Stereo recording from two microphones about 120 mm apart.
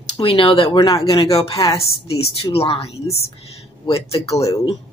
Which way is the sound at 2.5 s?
55° left (ahead or behind).